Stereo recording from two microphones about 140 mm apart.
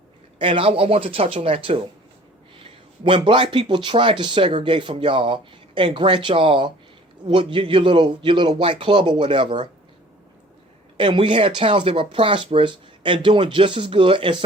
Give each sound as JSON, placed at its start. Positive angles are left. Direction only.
{"t": 0.3, "sound": "a man's voice", "side_deg": -40}
{"t": 10.9, "sound": "a man's voice", "side_deg": -35}